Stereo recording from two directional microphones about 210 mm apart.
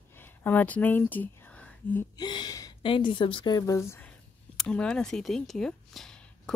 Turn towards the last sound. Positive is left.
turn(degrees=5)  # may be behind; listen again after turning